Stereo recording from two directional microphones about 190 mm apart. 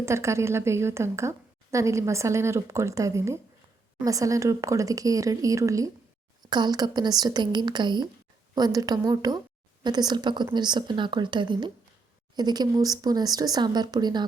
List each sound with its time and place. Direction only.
0.0 s a woman's voice: 15° right (ahead or behind)